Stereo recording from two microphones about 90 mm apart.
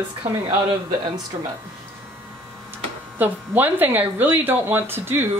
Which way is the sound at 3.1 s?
20° right (ahead or behind).